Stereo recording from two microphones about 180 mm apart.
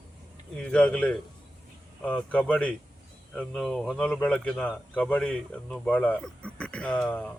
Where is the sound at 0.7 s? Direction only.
5° left (ahead or behind).